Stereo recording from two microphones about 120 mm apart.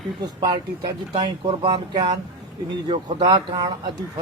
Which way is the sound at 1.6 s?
40° right (ahead or behind).